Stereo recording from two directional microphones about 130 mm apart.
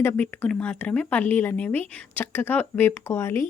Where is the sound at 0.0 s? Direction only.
15° left (ahead or behind).